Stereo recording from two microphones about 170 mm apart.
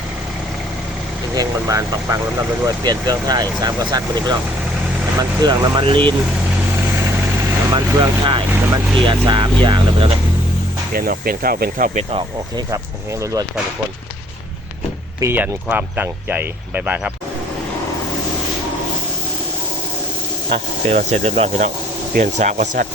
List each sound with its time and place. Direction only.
1.4 s speech: 20° right (ahead or behind)
5.4 s speech: 25° right (ahead or behind)
7.7 s speech: 25° right (ahead or behind)
10.9 s speech: 60° right (ahead or behind)
15.2 s speech: 10° right (ahead or behind)
20.5 s speech: 40° right (ahead or behind)